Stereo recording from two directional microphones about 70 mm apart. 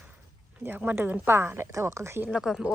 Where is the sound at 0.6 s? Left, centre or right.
Centre.